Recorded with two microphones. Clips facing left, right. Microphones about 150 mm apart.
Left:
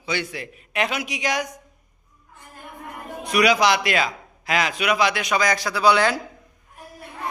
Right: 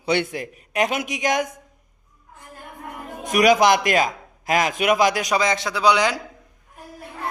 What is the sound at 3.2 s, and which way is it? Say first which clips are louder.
A man's voice: right 3 dB; 45° right (ahead or behind).